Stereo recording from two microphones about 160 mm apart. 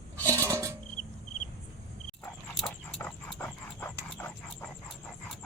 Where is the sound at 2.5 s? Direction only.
5° left (ahead or behind).